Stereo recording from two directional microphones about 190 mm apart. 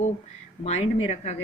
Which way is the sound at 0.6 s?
35° left (ahead or behind).